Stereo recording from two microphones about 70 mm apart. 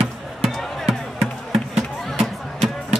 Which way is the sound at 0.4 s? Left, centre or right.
Centre.